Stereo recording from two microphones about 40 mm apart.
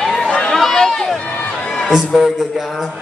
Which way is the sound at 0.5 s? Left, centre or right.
Centre.